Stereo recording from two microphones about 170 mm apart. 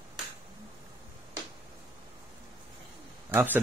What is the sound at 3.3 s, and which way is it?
Speech, 10° right (ahead or behind).